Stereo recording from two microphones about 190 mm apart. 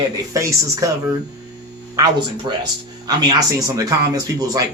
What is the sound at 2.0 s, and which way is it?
Speech, 20° right (ahead or behind).